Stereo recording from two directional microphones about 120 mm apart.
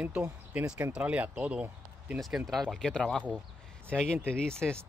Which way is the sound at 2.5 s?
5° left (ahead or behind).